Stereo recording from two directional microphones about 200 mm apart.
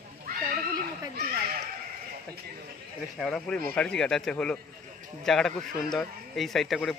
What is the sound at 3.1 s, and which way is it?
Speech, centre (ahead or behind).